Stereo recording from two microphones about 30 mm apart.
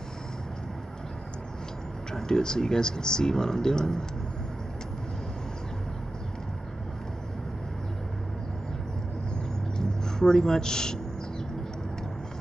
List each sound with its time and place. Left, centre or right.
2.1 s speech: left
9.8 s speech: left